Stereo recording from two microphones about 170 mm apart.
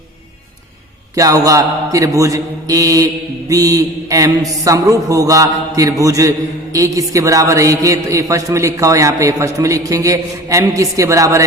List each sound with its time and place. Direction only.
1.1 s a man's voice: 20° right (ahead or behind)